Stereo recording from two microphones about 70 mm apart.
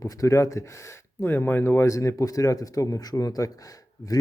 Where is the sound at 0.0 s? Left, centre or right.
Left.